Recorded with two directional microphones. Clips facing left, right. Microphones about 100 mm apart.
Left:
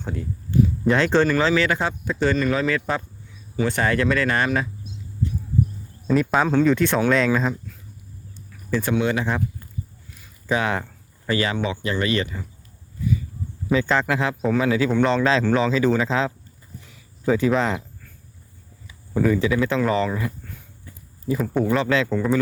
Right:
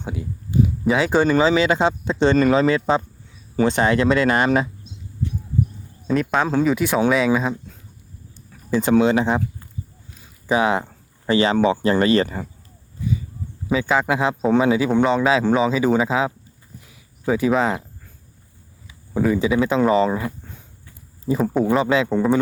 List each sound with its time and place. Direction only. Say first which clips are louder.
0.0 s speech: even; 10° right (ahead or behind)
6.1 s speech: left 1 dB; centre (ahead or behind)
8.7 s speech: right 5 dB; 20° right (ahead or behind)
10.2 s a sound: right 4 dB; 15° right (ahead or behind)
11.5 s speech: right 8 dB; 35° right (ahead or behind)
13.7 s speech: right 1 dB; 5° right (ahead or behind)
16.8 s a sound: left 1 dB; 10° right (ahead or behind)
19.1 s speech: right 1 dB; 15° right (ahead or behind)